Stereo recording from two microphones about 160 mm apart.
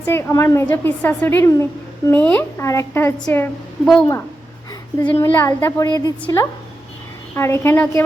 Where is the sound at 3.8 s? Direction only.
Centre (ahead or behind).